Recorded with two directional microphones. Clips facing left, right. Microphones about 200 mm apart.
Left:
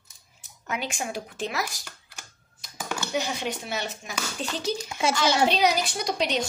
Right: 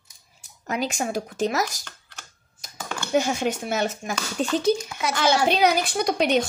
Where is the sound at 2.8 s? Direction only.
10° left (ahead or behind).